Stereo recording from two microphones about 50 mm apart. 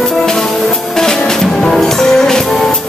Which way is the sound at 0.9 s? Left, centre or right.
Centre.